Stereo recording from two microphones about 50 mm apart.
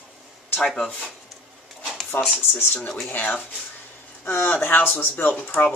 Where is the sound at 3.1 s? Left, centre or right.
Left.